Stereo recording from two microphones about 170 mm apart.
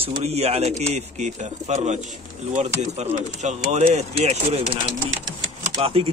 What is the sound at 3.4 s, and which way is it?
Speech, 45° right (ahead or behind).